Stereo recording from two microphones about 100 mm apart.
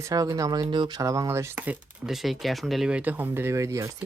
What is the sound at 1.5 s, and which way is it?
Speech, 15° right (ahead or behind).